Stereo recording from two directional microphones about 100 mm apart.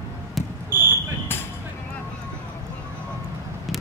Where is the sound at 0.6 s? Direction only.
20° right (ahead or behind).